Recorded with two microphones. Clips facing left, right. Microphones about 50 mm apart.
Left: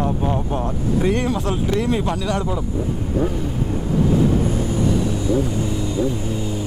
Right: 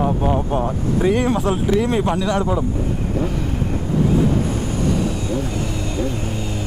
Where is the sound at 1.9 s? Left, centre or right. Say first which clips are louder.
Right 3 dB; centre.